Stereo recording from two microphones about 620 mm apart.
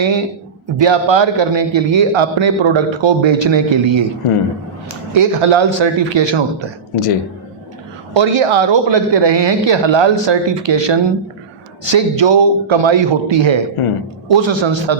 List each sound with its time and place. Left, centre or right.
0.8 s a man's voice: right
5.1 s a man's voice: right
6.9 s speech: left
8.1 s a man's voice: right
13.8 s speech: left
14.3 s a man's voice: right